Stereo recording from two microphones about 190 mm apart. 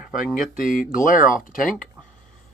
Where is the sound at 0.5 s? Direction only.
45° left (ahead or behind).